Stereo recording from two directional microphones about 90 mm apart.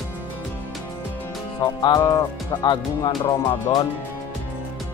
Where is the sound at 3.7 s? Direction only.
70° left (ahead or behind).